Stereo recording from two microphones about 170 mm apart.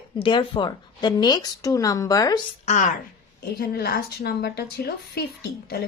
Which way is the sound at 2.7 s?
45° left (ahead or behind).